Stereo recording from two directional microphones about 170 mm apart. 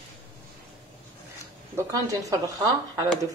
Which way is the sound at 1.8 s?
20° right (ahead or behind).